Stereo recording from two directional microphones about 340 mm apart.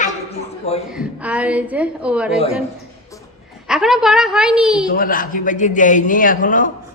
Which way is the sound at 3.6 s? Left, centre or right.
Centre.